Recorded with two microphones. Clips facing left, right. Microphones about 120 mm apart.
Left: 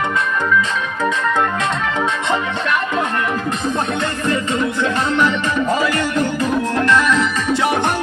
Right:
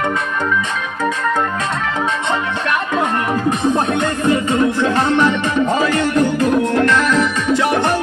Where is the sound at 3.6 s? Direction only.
20° right (ahead or behind).